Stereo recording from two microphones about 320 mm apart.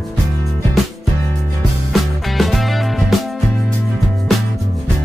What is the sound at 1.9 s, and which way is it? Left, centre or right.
Music, centre.